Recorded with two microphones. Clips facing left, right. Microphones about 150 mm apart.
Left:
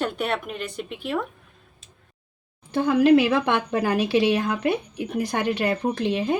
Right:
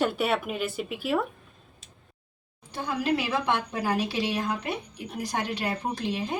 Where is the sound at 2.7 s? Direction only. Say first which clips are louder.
Left 11 dB; 65° left (ahead or behind).